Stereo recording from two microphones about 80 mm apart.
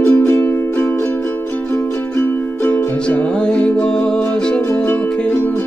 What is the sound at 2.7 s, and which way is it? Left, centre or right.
Music, centre.